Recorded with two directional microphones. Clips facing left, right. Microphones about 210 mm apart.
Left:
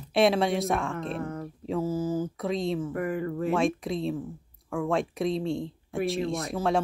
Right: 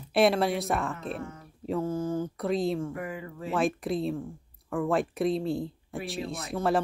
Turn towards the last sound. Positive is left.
turn(degrees=0)  # may be behind; listen again after turning